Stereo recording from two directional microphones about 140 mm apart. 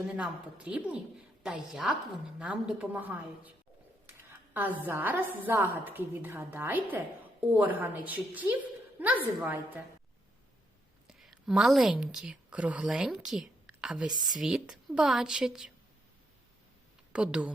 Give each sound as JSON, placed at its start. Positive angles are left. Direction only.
{"t": 0.2, "sound": "a woman's voice", "side_deg": -10}
{"t": 4.3, "sound": "a sound", "side_deg": -10}
{"t": 4.8, "sound": "a woman's voice", "side_deg": -15}
{"t": 11.1, "sound": "a woman's voice", "side_deg": 0}
{"t": 14.1, "sound": "speech", "side_deg": -30}
{"t": 14.3, "sound": "a woman's voice", "side_deg": -5}
{"t": 17.1, "sound": "speech", "side_deg": -5}